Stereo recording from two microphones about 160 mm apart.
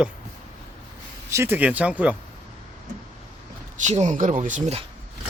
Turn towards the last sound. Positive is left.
turn(degrees=-45)  # may be behind; listen again after turning